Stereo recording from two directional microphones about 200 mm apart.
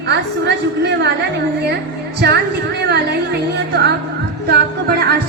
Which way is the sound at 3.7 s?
55° right (ahead or behind).